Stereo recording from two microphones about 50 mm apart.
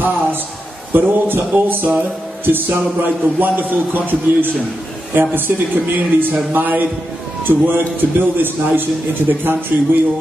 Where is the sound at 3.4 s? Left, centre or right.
Right.